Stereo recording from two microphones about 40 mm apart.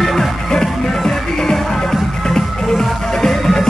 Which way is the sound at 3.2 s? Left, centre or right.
Centre.